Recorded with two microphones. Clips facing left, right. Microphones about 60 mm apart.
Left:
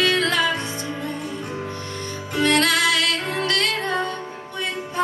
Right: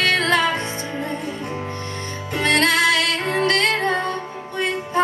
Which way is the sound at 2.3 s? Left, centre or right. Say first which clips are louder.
Right 1 dB; right.